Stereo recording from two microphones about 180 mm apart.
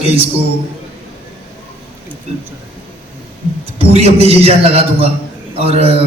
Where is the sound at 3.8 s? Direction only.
35° right (ahead or behind).